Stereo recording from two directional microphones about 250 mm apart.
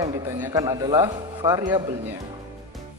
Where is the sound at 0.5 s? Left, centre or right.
Centre.